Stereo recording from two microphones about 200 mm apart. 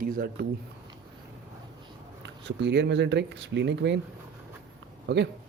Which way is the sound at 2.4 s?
60° right (ahead or behind).